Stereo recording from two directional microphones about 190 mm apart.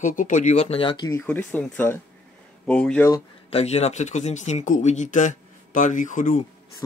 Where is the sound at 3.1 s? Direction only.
30° left (ahead or behind).